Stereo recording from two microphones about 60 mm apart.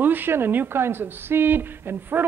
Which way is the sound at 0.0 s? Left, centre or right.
Right.